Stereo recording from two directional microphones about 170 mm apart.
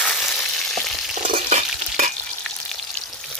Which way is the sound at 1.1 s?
45° right (ahead or behind).